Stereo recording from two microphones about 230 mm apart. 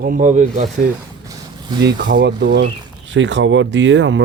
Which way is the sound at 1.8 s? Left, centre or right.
Right.